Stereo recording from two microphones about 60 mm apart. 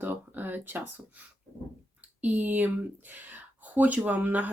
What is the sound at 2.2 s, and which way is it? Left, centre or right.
Speech, right.